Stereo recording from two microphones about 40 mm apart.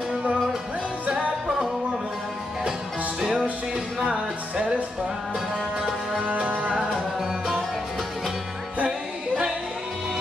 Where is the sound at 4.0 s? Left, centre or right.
Right.